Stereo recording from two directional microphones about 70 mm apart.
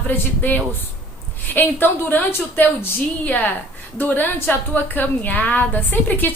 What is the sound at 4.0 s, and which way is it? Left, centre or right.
A woman's voice, left.